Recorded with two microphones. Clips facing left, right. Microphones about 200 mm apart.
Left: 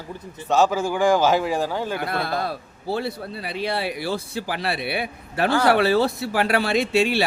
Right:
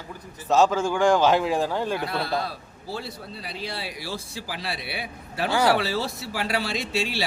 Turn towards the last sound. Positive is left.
turn(degrees=60)  # may be behind; listen again after turning